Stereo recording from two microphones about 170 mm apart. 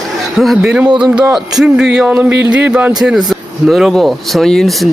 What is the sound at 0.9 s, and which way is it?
Speech, 25° right (ahead or behind).